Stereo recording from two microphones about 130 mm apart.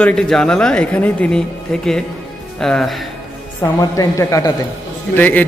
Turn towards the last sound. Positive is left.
turn(degrees=15)  # may be behind; listen again after turning